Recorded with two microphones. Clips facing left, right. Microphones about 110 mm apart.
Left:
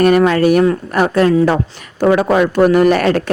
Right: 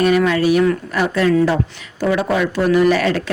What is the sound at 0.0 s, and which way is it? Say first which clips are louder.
Speech: left 4 dB; 50° left (ahead or behind).